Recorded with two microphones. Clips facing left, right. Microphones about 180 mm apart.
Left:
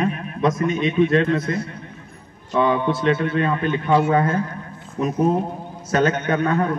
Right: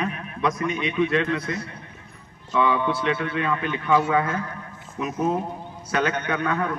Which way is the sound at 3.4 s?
30° left (ahead or behind).